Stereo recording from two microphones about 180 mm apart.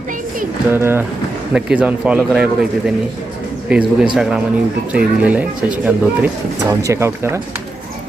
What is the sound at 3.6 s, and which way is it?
Speech, 5° right (ahead or behind).